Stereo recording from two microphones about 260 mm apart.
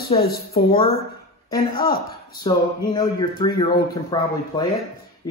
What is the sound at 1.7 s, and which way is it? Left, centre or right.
Speech, left.